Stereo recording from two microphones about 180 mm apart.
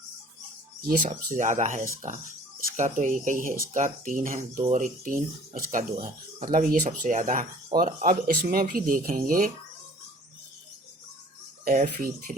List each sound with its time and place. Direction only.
0.8 s speech: 55° right (ahead or behind)
11.6 s speech: 50° right (ahead or behind)